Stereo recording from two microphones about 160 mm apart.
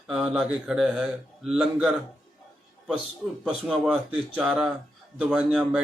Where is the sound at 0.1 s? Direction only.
5° right (ahead or behind).